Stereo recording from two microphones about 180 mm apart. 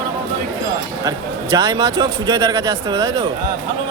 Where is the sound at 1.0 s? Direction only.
20° right (ahead or behind).